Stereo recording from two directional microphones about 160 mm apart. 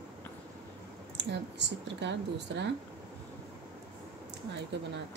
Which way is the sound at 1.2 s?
90° right.